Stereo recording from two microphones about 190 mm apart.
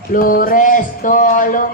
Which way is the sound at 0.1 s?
45° left (ahead or behind).